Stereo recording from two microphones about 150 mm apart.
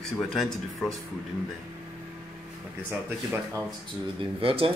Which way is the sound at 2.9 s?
15° right (ahead or behind).